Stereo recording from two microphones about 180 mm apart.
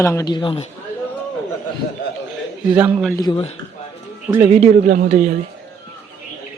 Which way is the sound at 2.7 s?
10° right (ahead or behind).